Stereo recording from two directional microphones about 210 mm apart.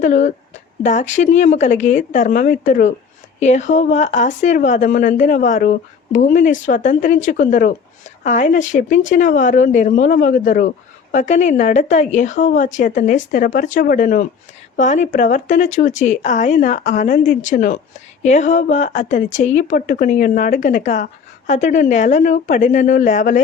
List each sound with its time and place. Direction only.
0.0 s speech: 35° left (ahead or behind)